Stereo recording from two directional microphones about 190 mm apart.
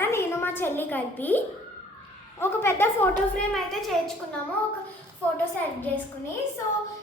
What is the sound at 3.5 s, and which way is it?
Speech, centre (ahead or behind).